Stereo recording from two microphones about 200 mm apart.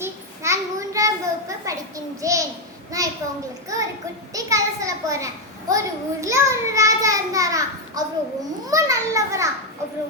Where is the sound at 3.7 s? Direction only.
15° right (ahead or behind).